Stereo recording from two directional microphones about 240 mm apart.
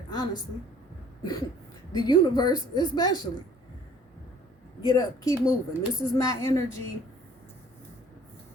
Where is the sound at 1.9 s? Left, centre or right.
Centre.